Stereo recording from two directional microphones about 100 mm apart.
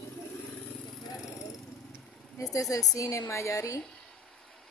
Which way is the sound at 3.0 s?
30° left (ahead or behind).